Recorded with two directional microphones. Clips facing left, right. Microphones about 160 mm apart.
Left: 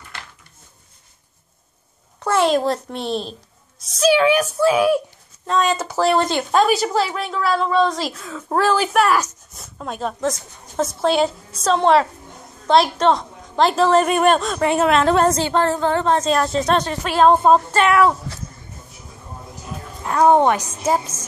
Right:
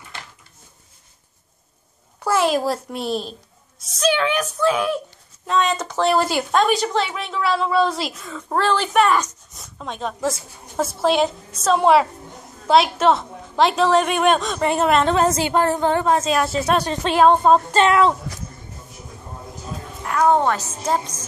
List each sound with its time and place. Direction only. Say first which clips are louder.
2.2 s a woman's voice: left 2 dB; 5° right (ahead or behind)
6.6 s a woman's voice: left 3 dB; 5° left (ahead or behind)
15.4 s a woman's voice: even; 15° right (ahead or behind)
16.9 s speech: right 2 dB; 20° right (ahead or behind)
17.3 s a woman's voice: left 2 dB; 5° left (ahead or behind)
17.6 s speech: even; 25° right (ahead or behind)
20.0 s a woman's voice: left 3 dB; 25° left (ahead or behind); by 21.1 s 10° left (ahead or behind)